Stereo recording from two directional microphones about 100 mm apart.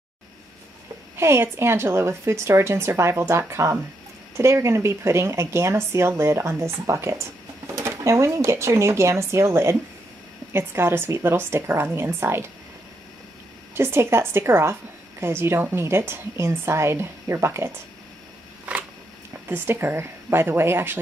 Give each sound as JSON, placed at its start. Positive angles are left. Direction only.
{"t": 1.1, "sound": "a woman's voice", "side_deg": -25}
{"t": 13.7, "sound": "a woman's voice", "side_deg": -25}
{"t": 19.4, "sound": "a woman's voice", "side_deg": -20}